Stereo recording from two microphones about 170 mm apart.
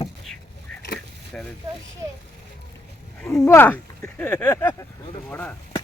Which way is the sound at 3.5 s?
10° left (ahead or behind).